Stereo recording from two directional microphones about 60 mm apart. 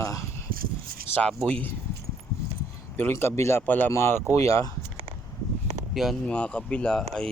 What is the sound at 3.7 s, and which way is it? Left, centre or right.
Speech, left.